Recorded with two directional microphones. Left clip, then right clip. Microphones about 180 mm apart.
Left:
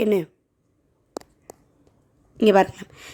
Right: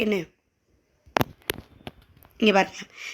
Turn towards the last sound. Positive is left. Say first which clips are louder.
# left 4 dB
turn(degrees=40)  # may be behind; listen again after turning